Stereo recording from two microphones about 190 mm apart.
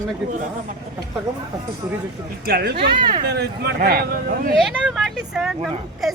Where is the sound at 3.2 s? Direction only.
60° right (ahead or behind).